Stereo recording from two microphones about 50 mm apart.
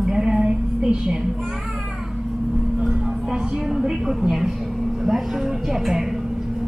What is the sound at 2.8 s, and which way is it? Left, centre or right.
A woman's voice, centre.